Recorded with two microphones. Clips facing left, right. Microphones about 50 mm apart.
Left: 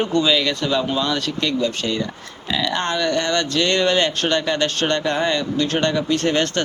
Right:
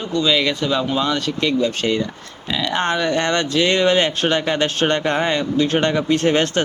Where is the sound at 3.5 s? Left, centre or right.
Centre.